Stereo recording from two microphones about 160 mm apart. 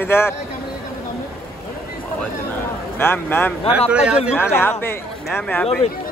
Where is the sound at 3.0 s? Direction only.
15° left (ahead or behind).